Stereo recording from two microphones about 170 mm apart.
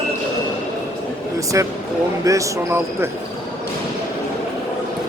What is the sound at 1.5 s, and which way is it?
Speech, 20° right (ahead or behind).